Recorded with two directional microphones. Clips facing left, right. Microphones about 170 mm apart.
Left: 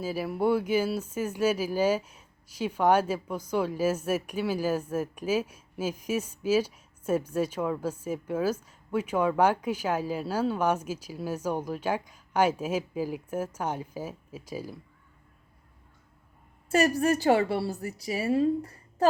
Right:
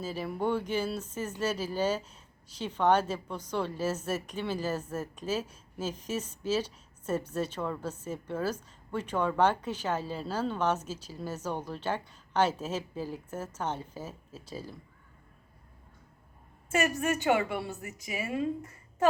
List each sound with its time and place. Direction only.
0.0 s speech: 10° left (ahead or behind)
16.6 s a woman's voice: 35° left (ahead or behind)